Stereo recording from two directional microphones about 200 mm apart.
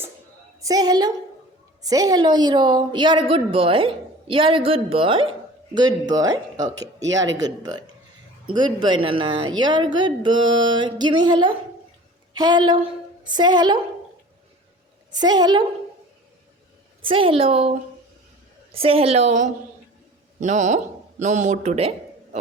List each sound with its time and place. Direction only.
0.6 s a woman's voice: 20° right (ahead or behind)
15.1 s a woman's voice: 20° right (ahead or behind)
17.1 s a woman's voice: 25° right (ahead or behind)